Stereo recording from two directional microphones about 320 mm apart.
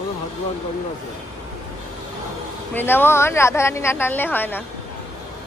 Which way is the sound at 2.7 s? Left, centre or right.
Centre.